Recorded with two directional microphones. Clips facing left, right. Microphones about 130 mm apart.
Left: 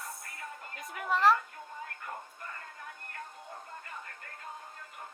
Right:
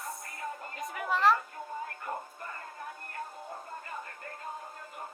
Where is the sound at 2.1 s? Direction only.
40° right (ahead or behind).